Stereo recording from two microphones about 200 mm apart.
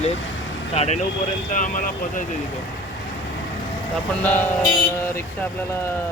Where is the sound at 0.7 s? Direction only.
30° left (ahead or behind).